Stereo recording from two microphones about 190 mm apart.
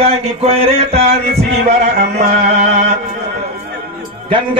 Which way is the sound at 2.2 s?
40° right (ahead or behind).